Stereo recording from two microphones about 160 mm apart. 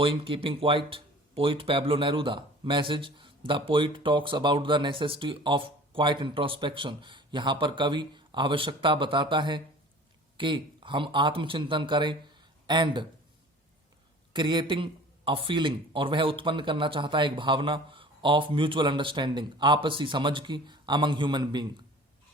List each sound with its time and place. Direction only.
0.0 s speech: 35° right (ahead or behind)
14.3 s speech: 30° right (ahead or behind)